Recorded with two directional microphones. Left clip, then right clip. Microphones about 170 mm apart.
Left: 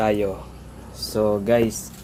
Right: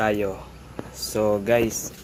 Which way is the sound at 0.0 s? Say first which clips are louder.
Left 2 dB; centre (ahead or behind).